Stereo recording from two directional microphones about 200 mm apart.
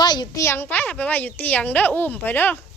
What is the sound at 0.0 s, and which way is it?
Speech, 20° left (ahead or behind).